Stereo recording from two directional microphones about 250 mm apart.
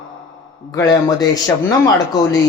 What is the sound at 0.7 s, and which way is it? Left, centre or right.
Speech, centre.